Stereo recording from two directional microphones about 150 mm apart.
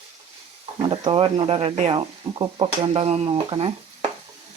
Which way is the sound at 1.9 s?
30° right (ahead or behind).